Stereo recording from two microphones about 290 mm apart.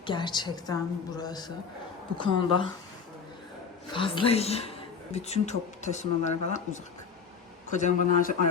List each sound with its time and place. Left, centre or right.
0.0 s a woman's voice: centre
3.9 s speech: centre
7.8 s speech: left